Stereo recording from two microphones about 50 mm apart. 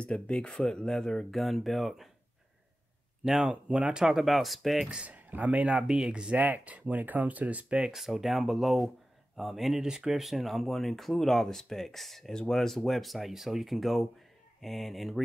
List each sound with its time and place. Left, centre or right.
0.0 s speech: left
1.3 s speech: centre
3.3 s speech: centre
4.3 s speech: centre
4.8 s speech: right
5.9 s speech: centre
6.3 s speech: right
7.8 s speech: centre
9.8 s speech: centre
10.2 s speech: centre